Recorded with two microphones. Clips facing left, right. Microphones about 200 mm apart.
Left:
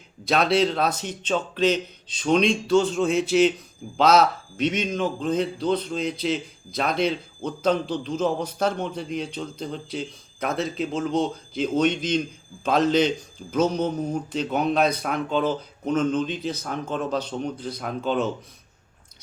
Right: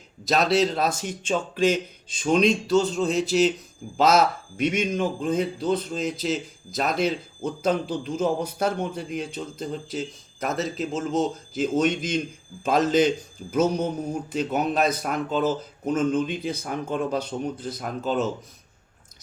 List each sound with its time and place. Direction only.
0.3 s speech: centre (ahead or behind)
4.6 s speech: 10° right (ahead or behind)